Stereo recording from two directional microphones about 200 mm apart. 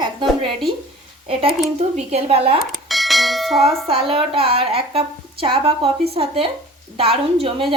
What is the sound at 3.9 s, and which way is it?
A woman's voice, 25° right (ahead or behind).